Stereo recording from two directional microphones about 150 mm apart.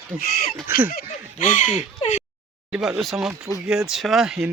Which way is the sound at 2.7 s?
5° right (ahead or behind).